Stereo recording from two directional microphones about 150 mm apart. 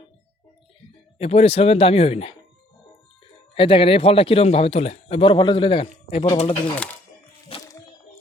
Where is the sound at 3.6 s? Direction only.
35° left (ahead or behind).